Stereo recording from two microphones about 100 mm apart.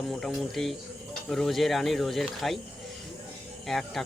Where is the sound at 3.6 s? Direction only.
Centre (ahead or behind).